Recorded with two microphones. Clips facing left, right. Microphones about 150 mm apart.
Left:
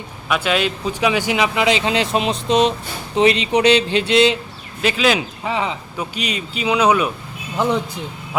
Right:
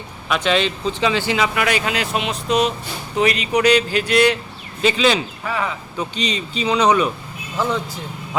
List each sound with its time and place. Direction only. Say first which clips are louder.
0.3 s speech: even; 5° left (ahead or behind); by 4.4 s 25° left (ahead or behind)
4.8 s speech: right 1 dB; 5° left (ahead or behind)
5.4 s speech: left 2 dB; 20° left (ahead or behind)
6.0 s a man's voice: right 2 dB; 10° left (ahead or behind)